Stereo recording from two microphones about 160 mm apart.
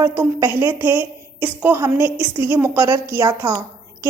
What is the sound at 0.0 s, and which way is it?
A woman's voice, 15° right (ahead or behind).